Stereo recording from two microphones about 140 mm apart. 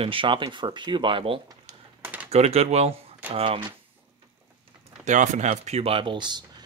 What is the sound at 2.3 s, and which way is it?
Speech, 50° right (ahead or behind).